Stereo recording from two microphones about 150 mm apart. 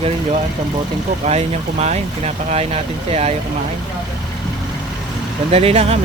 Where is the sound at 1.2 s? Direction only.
45° right (ahead or behind).